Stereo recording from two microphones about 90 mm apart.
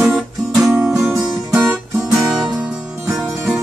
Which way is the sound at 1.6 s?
30° right (ahead or behind).